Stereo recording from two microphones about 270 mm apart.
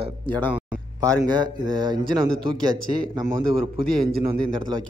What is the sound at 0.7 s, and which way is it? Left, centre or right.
Speech, centre.